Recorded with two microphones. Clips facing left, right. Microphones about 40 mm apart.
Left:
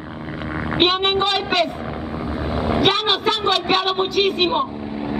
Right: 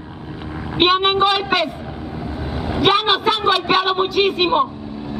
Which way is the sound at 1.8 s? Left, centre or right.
Centre.